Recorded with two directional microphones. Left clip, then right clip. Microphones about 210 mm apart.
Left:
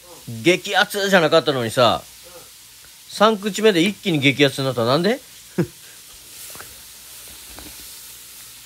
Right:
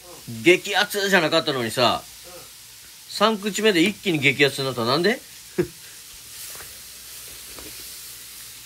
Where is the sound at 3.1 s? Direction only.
30° left (ahead or behind).